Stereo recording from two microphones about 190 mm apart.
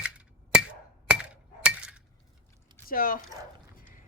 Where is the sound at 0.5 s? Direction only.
5° right (ahead or behind).